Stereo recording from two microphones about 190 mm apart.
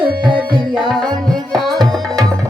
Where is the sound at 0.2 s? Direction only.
25° right (ahead or behind).